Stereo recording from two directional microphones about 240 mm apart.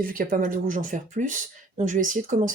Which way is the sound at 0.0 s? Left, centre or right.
Right.